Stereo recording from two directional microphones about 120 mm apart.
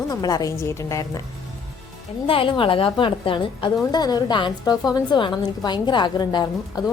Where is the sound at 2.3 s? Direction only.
45° left (ahead or behind).